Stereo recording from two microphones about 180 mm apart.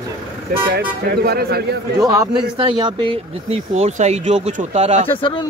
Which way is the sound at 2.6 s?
30° right (ahead or behind).